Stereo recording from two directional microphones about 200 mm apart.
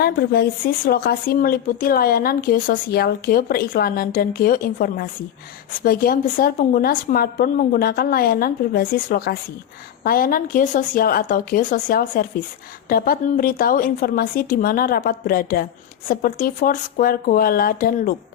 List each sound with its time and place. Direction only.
0.0 s speech: 50° left (ahead or behind)